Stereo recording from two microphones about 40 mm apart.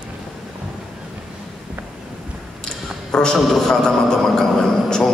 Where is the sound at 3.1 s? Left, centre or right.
Centre.